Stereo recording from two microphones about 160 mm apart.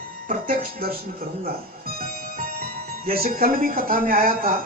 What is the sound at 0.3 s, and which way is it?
Speech, 65° right (ahead or behind).